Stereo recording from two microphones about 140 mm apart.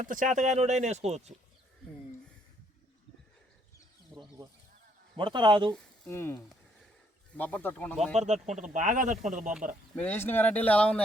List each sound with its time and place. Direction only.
0.1 s speech: 70° right (ahead or behind); by 1.3 s 50° right (ahead or behind)
4.1 s a sound: centre (ahead or behind)
5.1 s a man's voice: 35° right (ahead or behind)
6.1 s speech: 15° left (ahead or behind)
8.1 s speech: 55° right (ahead or behind)
9.9 s speech: 15° left (ahead or behind)